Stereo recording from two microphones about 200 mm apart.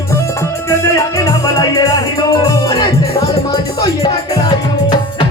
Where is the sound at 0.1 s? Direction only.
15° left (ahead or behind).